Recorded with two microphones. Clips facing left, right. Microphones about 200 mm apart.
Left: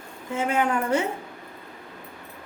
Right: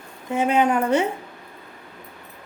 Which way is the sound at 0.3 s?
20° right (ahead or behind).